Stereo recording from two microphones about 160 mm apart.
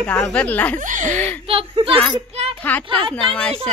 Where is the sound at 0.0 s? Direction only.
5° left (ahead or behind).